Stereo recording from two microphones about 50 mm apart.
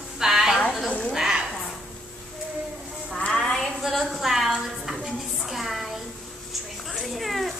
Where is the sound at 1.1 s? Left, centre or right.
Centre.